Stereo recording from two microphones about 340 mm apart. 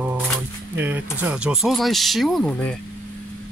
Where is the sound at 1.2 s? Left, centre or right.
Centre.